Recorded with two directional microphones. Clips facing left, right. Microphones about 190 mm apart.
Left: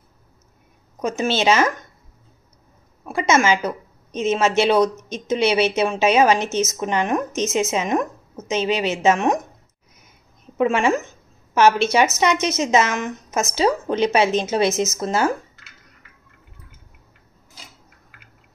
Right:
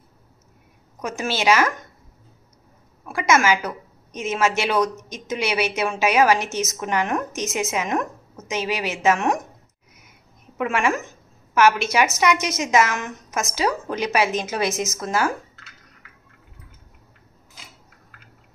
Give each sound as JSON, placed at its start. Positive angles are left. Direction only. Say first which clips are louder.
{"t": 1.0, "sound": "speech", "louder": "left 3 dB", "side_deg": 25}
{"t": 3.1, "sound": "a sound", "louder": "left 1 dB", "side_deg": 25}
{"t": 4.3, "sound": "speech", "louder": "left 4 dB", "side_deg": 25}
{"t": 10.6, "sound": "speech", "louder": "left 4 dB", "side_deg": 30}